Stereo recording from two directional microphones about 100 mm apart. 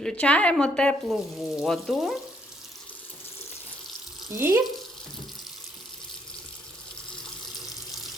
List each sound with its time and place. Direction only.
0.0 s a woman's voice: 10° left (ahead or behind)
4.4 s speech: 25° right (ahead or behind)